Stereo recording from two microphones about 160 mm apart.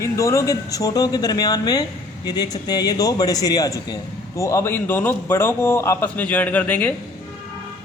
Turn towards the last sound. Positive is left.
turn(degrees=10)  # may be behind; listen again after turning